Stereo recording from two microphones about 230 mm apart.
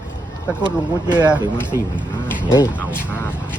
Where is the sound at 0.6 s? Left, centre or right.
Centre.